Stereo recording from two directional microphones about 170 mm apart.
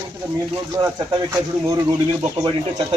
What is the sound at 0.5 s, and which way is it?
Speech, 20° right (ahead or behind).